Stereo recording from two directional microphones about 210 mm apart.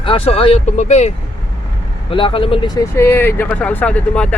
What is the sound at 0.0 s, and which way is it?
Speech, 25° left (ahead or behind).